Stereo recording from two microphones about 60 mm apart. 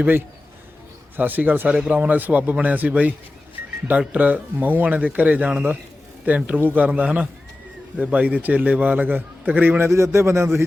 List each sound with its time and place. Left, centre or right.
1.1 s a man's voice: right
9.9 s a man's voice: right